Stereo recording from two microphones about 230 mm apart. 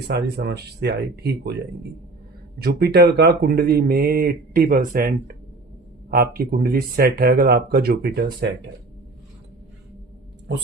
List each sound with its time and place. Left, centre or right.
0.1 s speech: right
2.6 s speech: right